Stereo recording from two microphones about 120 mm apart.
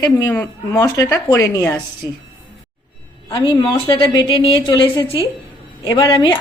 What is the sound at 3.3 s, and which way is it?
A woman's voice, 40° left (ahead or behind).